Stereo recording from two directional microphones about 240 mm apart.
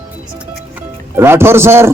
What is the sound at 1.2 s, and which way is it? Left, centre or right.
Speech, centre.